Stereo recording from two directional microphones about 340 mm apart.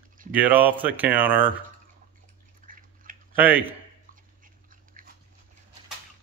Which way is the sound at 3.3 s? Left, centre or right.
Centre.